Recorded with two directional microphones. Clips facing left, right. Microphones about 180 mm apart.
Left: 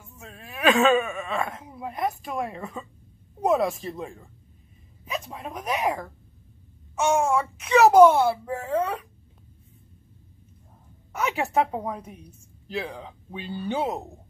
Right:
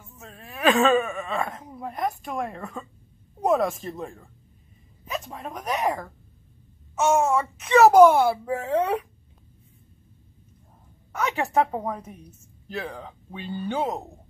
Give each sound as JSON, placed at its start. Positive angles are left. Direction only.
{"t": 0.2, "sound": "a woman's voice", "side_deg": 0}
{"t": 8.3, "sound": "speech", "side_deg": -15}
{"t": 11.1, "sound": "a woman's voice", "side_deg": 0}